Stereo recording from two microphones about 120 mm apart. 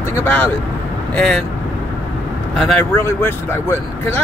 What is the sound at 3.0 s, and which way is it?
Speech, 20° left (ahead or behind).